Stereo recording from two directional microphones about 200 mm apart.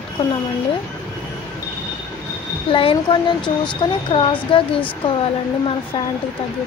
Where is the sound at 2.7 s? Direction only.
25° left (ahead or behind).